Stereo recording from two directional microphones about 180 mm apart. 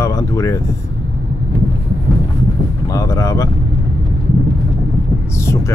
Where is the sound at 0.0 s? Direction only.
15° left (ahead or behind).